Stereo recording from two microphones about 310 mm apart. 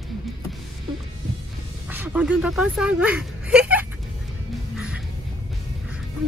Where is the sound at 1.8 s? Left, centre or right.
Centre.